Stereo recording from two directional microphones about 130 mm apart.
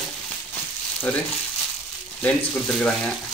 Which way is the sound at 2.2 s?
10° left (ahead or behind).